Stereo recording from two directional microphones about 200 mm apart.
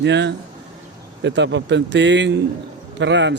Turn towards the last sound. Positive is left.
turn(degrees=-60)  # may be behind; listen again after turning